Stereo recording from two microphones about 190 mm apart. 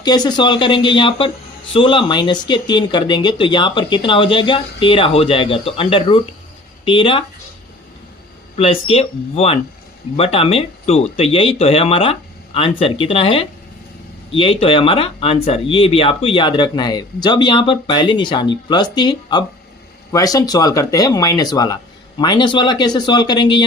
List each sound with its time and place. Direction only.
0.0 s speech: 20° left (ahead or behind)
8.5 s speech: 30° left (ahead or behind)